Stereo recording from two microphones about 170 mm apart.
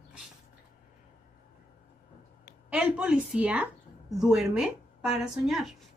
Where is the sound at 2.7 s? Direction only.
5° right (ahead or behind).